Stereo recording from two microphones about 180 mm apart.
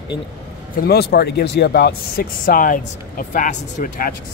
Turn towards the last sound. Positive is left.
turn(degrees=50)  # may be behind; listen again after turning